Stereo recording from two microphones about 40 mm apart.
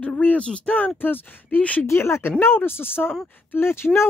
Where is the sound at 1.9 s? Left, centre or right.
Left.